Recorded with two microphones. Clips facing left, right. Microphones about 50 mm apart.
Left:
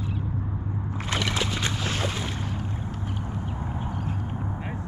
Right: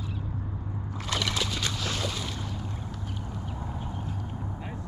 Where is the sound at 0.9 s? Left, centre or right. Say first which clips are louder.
Left 2 dB; left.